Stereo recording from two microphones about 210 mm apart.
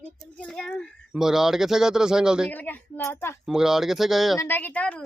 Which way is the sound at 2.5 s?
10° left (ahead or behind).